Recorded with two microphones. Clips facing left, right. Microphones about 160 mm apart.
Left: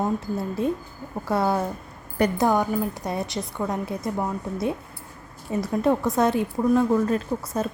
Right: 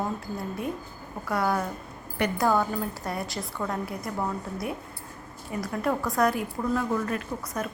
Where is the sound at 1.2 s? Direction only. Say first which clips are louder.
Left 4 dB; 25° left (ahead or behind).